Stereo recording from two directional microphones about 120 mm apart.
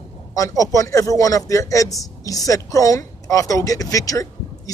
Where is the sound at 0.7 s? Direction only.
30° left (ahead or behind).